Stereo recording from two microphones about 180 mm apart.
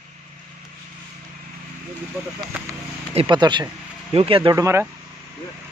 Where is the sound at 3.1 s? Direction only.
30° right (ahead or behind).